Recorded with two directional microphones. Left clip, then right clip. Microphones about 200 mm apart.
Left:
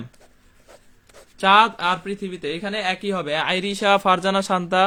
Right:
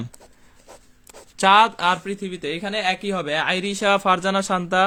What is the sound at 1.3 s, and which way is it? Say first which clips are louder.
Speech: even; 30° right (ahead or behind).